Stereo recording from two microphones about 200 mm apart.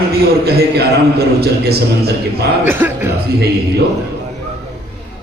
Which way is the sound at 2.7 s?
10° right (ahead or behind).